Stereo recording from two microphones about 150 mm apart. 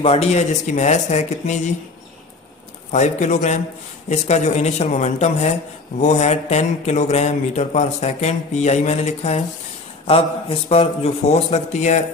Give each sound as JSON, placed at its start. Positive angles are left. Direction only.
{"t": 0.0, "sound": "speech", "side_deg": 45}
{"t": 2.9, "sound": "speech", "side_deg": 50}